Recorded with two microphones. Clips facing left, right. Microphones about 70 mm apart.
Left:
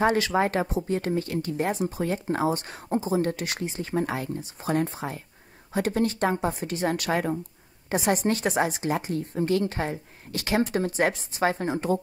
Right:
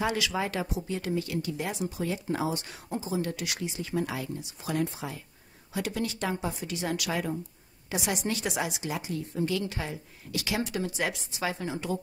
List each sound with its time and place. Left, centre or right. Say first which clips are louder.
0.0 s speech: left 7 dB; left